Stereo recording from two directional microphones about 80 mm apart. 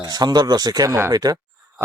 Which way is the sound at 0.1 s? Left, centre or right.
Right.